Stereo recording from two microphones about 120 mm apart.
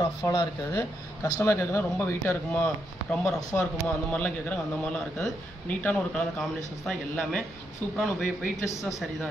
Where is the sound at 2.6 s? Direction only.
5° left (ahead or behind).